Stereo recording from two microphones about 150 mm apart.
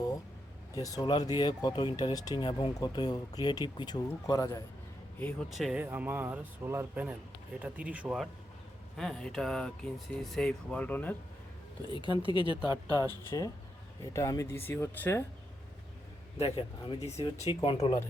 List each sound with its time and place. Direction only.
0.8 s speech: 20° left (ahead or behind)
5.2 s speech: centre (ahead or behind)
5.8 s speech: 10° right (ahead or behind); by 11.1 s 10° left (ahead or behind)
11.9 s speech: 35° left (ahead or behind); by 15.2 s 15° left (ahead or behind)
16.4 s speech: 35° left (ahead or behind)